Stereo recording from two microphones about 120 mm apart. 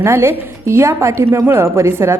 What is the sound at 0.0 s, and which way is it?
A woman's voice, 20° right (ahead or behind).